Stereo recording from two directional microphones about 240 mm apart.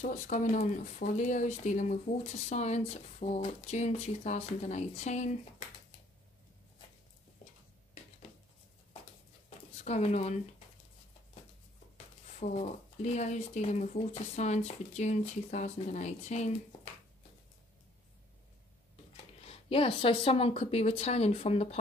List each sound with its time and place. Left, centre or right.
0.0 s speech: left
9.8 s speech: left
12.4 s speech: left
19.4 s speech: left